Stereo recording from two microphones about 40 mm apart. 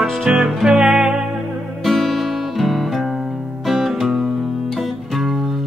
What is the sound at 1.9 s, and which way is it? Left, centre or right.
Music, centre.